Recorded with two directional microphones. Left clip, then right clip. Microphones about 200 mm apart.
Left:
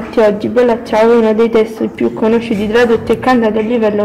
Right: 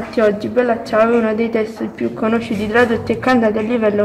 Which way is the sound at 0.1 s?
15° left (ahead or behind).